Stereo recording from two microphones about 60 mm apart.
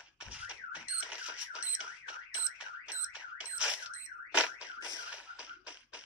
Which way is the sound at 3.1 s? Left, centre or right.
Centre.